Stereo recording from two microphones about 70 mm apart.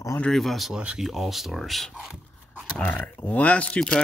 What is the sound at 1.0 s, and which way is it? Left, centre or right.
Speech, centre.